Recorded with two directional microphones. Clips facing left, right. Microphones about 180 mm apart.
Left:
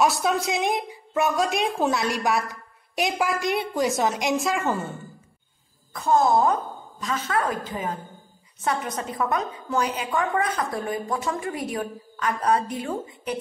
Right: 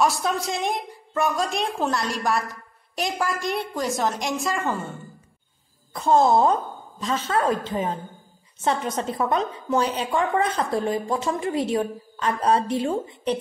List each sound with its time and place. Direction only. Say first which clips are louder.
0.0 s a woman's voice: left 1 dB; centre (ahead or behind)
5.9 s a woman's voice: right 2 dB; 25° right (ahead or behind)